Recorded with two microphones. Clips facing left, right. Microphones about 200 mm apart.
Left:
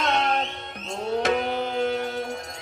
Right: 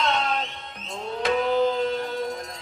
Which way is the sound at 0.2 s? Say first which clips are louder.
Left 2 dB; 60° left (ahead or behind).